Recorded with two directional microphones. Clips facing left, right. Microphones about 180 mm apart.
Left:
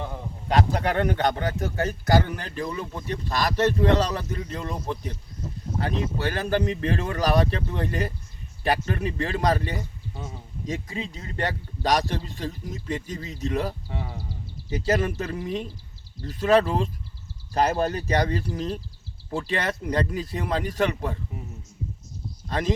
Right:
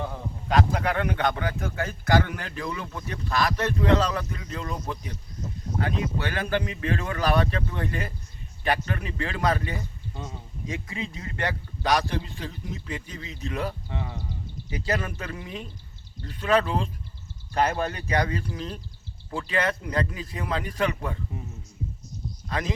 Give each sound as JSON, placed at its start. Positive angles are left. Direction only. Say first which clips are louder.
{"t": 0.4, "sound": "a man's voice", "louder": "left 1 dB", "side_deg": 35}
{"t": 6.2, "sound": "a man's voice", "louder": "left 6 dB", "side_deg": 40}
{"t": 13.8, "sound": "speech", "louder": "even", "side_deg": 5}
{"t": 14.7, "sound": "a man's voice", "louder": "left 5 dB", "side_deg": 40}